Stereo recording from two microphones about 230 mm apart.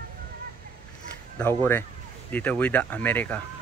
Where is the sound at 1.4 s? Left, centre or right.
Centre.